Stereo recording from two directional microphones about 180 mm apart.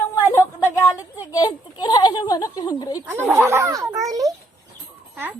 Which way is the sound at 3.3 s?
15° right (ahead or behind).